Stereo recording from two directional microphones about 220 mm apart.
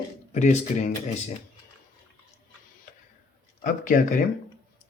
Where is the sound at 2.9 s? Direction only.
35° left (ahead or behind).